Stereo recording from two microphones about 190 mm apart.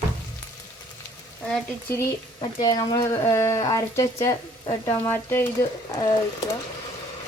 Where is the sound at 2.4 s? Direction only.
20° left (ahead or behind).